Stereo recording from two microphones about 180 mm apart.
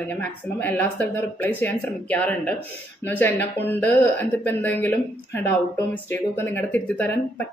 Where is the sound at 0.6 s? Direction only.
10° left (ahead or behind).